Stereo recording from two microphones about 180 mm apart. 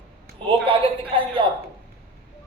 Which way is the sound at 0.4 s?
30° right (ahead or behind).